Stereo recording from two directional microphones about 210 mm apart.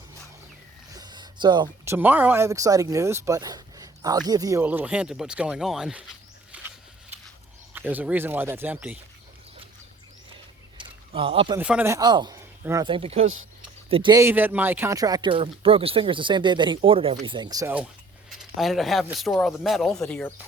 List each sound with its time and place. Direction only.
0.9 s speech: 20° right (ahead or behind)
6.5 s a sound: 5° right (ahead or behind)
7.7 s speech: 10° right (ahead or behind)
10.8 s a sound: 25° right (ahead or behind)
11.5 s speech: 5° right (ahead or behind); by 13.2 s 25° right (ahead or behind)
13.2 s speech: 70° right (ahead or behind)
13.9 s speech: 20° right (ahead or behind)
18.3 s speech: centre (ahead or behind)